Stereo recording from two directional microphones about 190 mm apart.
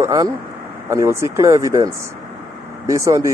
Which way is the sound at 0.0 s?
15° right (ahead or behind).